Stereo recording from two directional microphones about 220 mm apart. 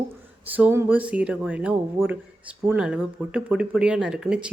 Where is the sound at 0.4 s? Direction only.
10° right (ahead or behind).